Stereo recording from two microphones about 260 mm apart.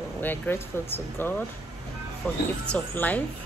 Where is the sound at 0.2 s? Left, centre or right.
Centre.